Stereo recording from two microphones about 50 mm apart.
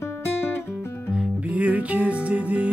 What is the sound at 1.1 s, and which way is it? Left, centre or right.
Music, right.